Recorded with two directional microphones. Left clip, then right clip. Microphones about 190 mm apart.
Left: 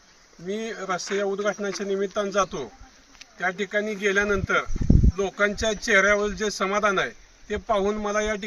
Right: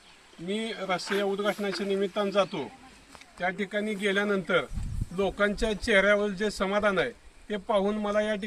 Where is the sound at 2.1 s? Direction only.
5° left (ahead or behind).